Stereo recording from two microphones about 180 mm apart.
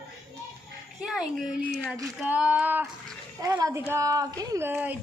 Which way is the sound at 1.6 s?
5° left (ahead or behind).